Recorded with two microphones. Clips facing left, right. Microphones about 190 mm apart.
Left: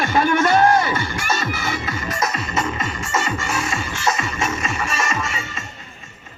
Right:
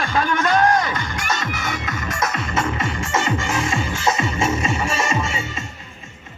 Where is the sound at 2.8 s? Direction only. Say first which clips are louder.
Right 1 dB; 15° right (ahead or behind).